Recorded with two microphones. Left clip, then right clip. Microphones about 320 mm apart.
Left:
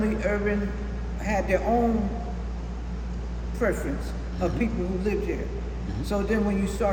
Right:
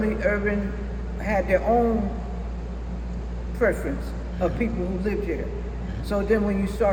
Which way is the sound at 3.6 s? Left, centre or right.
Centre.